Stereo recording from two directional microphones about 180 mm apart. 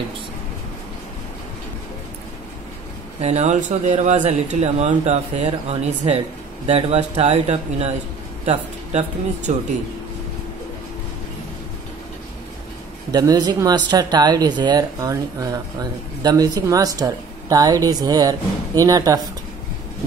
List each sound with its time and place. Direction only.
3.2 s speech: 40° right (ahead or behind)
9.5 s speech: 40° right (ahead or behind)
13.1 s speech: 20° right (ahead or behind)